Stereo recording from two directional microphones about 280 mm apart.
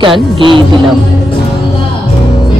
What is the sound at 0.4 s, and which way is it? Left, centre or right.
Speech, centre.